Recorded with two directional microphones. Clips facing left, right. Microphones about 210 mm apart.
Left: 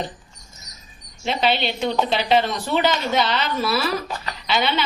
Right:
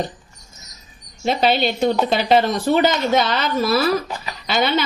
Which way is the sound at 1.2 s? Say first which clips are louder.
Right 4 dB; 45° right (ahead or behind).